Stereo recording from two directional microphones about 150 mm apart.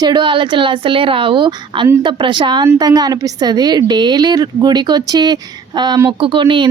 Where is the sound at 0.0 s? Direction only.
30° right (ahead or behind).